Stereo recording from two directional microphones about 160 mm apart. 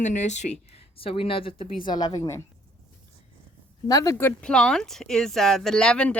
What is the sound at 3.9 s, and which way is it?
Speech, 20° left (ahead or behind).